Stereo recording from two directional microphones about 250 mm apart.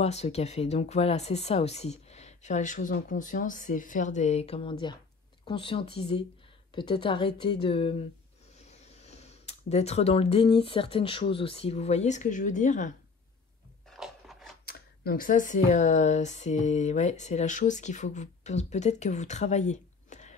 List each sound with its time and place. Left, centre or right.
0.0 s speech: left
13.8 s biting: centre
14.7 s speech: left